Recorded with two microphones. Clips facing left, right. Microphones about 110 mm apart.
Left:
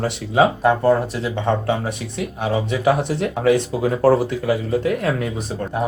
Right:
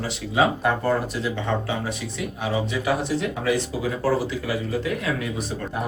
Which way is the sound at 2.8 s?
50° left (ahead or behind).